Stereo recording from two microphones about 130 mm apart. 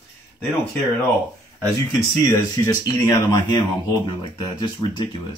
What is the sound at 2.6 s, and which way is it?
Speech, 25° left (ahead or behind).